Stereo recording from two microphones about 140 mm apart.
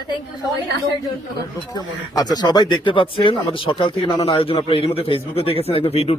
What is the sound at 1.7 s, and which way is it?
Speech, 30° left (ahead or behind).